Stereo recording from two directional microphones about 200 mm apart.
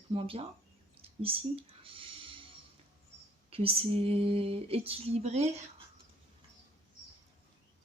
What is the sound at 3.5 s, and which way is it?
Speech, 30° right (ahead or behind).